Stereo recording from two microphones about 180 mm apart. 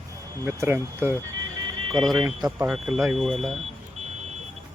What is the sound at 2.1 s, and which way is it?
Speech, 25° right (ahead or behind).